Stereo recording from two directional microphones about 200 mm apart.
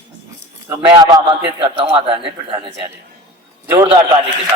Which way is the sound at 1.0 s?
20° right (ahead or behind).